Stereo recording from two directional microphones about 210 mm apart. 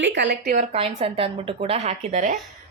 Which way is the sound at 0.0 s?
60° right (ahead or behind).